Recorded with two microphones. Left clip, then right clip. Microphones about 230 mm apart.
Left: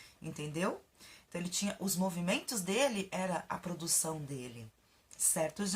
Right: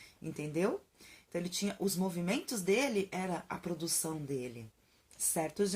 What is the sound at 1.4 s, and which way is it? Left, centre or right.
Speech, left.